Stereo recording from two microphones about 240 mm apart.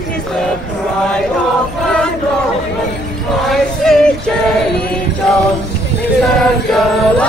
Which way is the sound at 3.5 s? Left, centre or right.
Centre.